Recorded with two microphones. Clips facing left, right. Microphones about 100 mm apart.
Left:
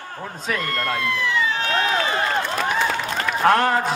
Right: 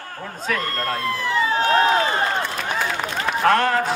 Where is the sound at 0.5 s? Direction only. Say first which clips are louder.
Left 1 dB; 35° right (ahead or behind).